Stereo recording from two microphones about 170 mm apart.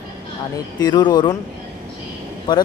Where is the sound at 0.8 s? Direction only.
25° left (ahead or behind).